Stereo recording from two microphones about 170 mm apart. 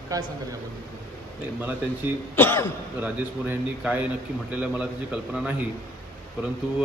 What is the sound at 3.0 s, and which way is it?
Mantra, 10° right (ahead or behind).